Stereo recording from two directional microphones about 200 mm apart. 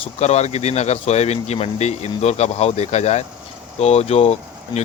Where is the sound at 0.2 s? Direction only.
35° left (ahead or behind).